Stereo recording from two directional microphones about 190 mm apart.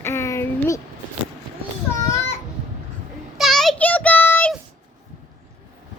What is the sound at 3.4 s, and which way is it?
Child singing, centre (ahead or behind).